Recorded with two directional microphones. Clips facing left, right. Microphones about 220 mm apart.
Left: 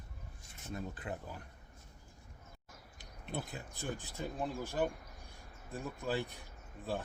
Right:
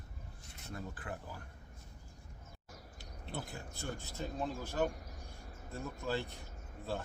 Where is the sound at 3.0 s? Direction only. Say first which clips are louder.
Left 2 dB; 20° left (ahead or behind).